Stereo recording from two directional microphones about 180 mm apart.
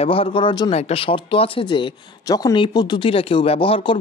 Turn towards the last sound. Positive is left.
turn(degrees=30)  # may be behind; listen again after turning